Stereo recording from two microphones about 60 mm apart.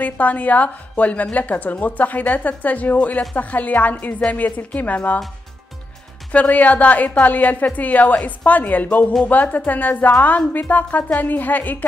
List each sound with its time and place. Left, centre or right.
0.0 s a woman's voice: left
6.3 s a woman's voice: left